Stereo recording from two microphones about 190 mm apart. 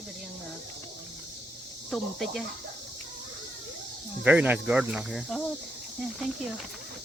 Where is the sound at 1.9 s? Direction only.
Centre (ahead or behind).